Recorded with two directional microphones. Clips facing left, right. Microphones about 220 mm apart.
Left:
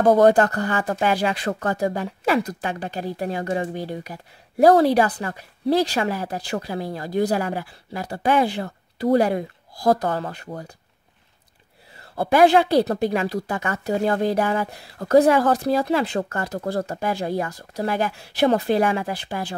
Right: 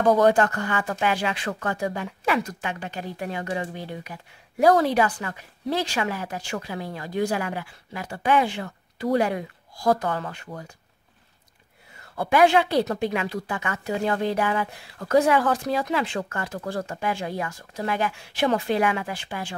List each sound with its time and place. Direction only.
0.1 s speech: 40° left (ahead or behind)
12.0 s speech: 35° left (ahead or behind)